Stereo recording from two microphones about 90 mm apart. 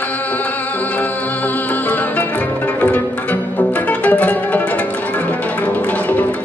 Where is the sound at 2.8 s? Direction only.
20° left (ahead or behind).